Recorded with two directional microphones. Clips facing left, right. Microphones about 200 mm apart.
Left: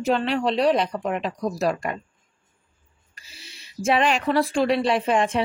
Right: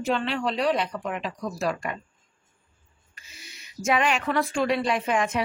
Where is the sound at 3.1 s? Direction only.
30° left (ahead or behind).